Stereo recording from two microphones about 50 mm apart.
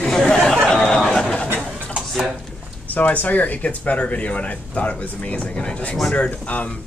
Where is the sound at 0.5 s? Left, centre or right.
Centre.